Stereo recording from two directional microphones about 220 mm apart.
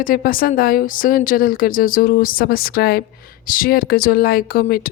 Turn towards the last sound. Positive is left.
turn(degrees=40)  # may be behind; listen again after turning